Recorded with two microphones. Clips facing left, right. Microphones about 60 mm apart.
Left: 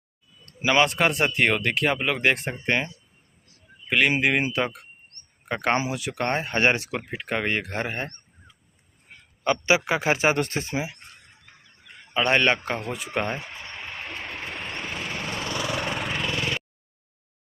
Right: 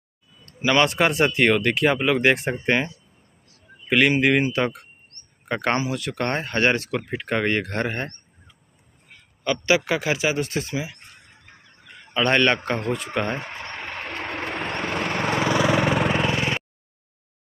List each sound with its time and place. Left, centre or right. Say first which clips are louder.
0.6 s speech: right 1 dB; centre
0.8 s speech: right 3 dB; centre
4.2 s speech: right 3 dB; centre
5.1 s a sound: right 1 dB; right
5.5 s speech: right 1 dB; centre
9.7 s speech: right 2 dB; left
10.0 s speech: left 1 dB; left
12.1 s a man's voice: right 2 dB; centre
13.4 s a sound: right 4 dB; right
14.1 s lawn mower: right 8 dB; right
16.1 s vehicle: right 5 dB; right